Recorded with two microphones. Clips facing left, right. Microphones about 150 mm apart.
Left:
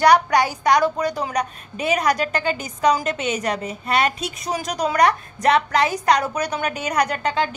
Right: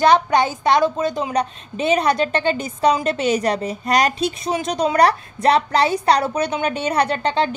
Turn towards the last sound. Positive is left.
turn(degrees=-30)  # may be behind; listen again after turning